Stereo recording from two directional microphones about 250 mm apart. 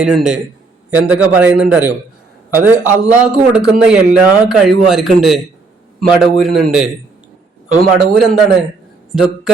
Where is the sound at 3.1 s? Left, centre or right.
Centre.